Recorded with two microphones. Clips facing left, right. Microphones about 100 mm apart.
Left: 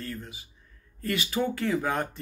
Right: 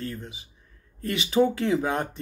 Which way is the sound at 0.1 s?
20° right (ahead or behind).